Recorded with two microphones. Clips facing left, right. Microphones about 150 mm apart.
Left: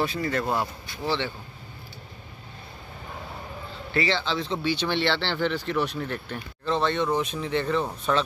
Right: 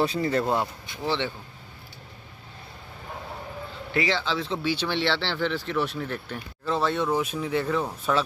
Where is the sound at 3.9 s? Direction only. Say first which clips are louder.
Even; 10° right (ahead or behind).